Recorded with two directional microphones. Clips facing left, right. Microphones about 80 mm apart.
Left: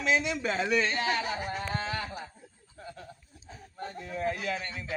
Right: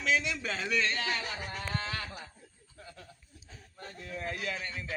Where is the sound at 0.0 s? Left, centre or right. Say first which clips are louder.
Left 3 dB; centre.